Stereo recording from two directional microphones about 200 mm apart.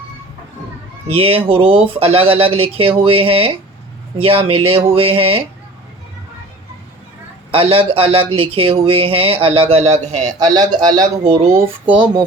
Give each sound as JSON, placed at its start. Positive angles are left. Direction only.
{"t": 1.1, "sound": "speech", "side_deg": -30}
{"t": 7.5, "sound": "a man's voice", "side_deg": -25}
{"t": 10.3, "sound": "speech", "side_deg": -20}